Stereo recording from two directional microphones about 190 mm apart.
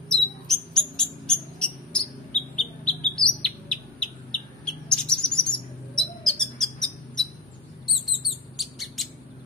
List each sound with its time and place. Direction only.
0.1 s a sound: 5° left (ahead or behind)
2.8 s bird: 5° left (ahead or behind)
5.9 s owl: 5° left (ahead or behind)
7.8 s chirp: centre (ahead or behind)